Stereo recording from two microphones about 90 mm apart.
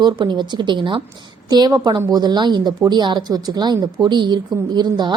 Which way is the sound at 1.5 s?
50° right (ahead or behind).